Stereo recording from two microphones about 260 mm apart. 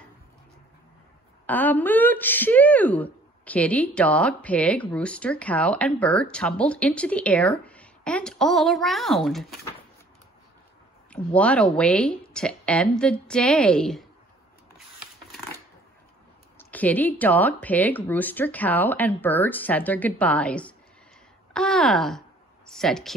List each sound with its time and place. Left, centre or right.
1.4 s speech: centre
11.1 s speech: centre
16.5 s speech: centre